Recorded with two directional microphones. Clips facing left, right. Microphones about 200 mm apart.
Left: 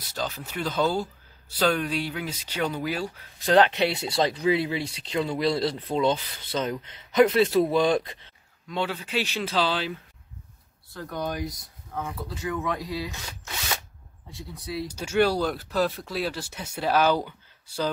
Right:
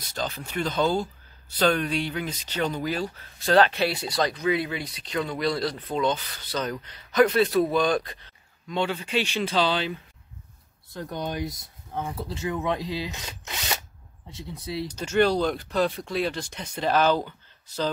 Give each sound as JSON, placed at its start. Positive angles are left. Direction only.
{"t": 0.1, "sound": "speech", "side_deg": 5}
{"t": 8.6, "sound": "speech", "side_deg": 0}
{"t": 10.9, "sound": "speech", "side_deg": -20}
{"t": 14.3, "sound": "speech", "side_deg": -25}
{"t": 14.9, "sound": "speech", "side_deg": 10}